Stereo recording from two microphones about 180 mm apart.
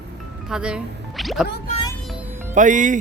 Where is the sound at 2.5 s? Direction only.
45° right (ahead or behind).